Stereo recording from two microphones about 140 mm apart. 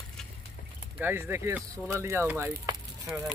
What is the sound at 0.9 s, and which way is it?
Speech, 15° right (ahead or behind).